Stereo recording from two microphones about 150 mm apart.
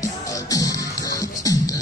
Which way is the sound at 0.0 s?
20° left (ahead or behind).